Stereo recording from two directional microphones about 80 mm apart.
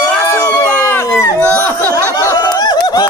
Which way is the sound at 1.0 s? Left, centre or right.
Left.